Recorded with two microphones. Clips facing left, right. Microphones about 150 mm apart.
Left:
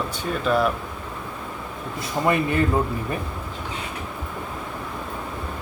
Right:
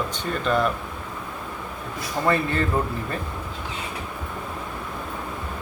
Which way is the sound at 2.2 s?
15° left (ahead or behind).